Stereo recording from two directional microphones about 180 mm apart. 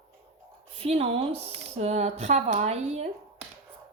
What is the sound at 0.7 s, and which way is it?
A woman's voice, 35° right (ahead or behind).